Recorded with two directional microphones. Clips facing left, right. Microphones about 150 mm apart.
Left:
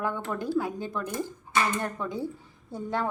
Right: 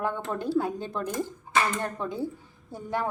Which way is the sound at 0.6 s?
30° right (ahead or behind).